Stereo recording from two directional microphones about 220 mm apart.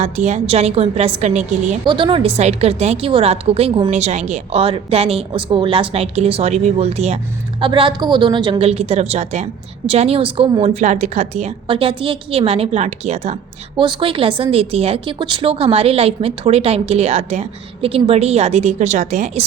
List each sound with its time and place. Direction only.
0.0 s a woman's voice: 30° right (ahead or behind)